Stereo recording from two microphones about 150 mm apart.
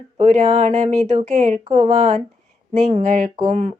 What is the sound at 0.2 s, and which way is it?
Speech, 55° right (ahead or behind).